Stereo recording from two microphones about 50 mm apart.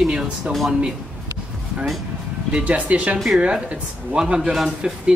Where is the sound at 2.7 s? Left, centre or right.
Right.